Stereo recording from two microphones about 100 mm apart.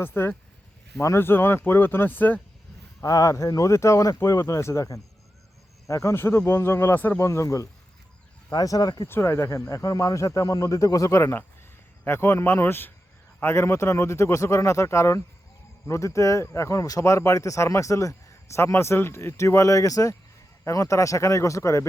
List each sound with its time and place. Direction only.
0.0 s a man's voice: 20° left (ahead or behind)
3.0 s a man's voice: 35° left (ahead or behind); by 7.2 s 20° left (ahead or behind)
7.2 s speech: 30° left (ahead or behind)
9.0 s a man's voice: 25° left (ahead or behind)